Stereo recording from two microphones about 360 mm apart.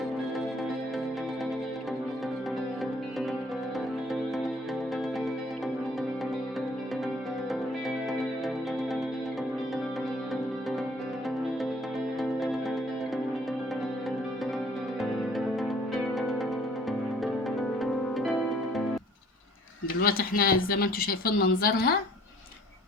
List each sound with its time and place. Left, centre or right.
12.2 s music: centre
16.1 s music: centre
17.7 s harp: centre
20.0 s speech: left